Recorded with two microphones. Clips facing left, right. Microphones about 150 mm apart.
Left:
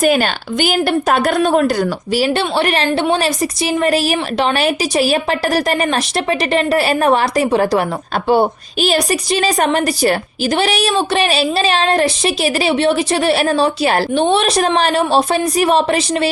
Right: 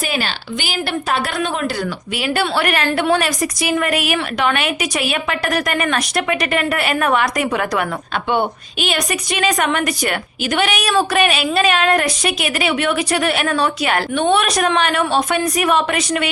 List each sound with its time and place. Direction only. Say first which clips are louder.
0.0 s a woman's voice: left 9 dB; 50° left (ahead or behind); by 16.3 s 30° left (ahead or behind)